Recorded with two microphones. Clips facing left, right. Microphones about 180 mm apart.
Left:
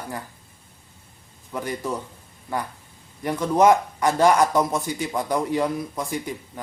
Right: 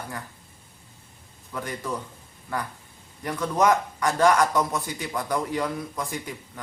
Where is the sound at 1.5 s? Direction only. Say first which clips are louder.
Left 4 dB; 25° left (ahead or behind).